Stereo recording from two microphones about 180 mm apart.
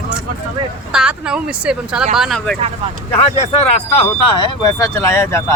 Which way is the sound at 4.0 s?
25° left (ahead or behind).